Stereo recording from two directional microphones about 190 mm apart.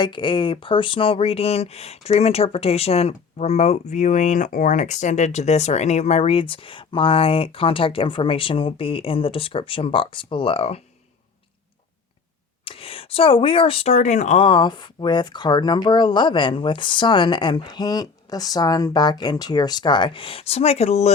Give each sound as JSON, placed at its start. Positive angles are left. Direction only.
{"t": 0.0, "sound": "speech", "side_deg": 25}
{"t": 12.6, "sound": "speech", "side_deg": 30}